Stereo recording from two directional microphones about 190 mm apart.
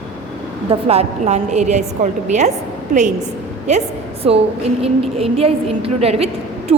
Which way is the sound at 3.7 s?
35° right (ahead or behind).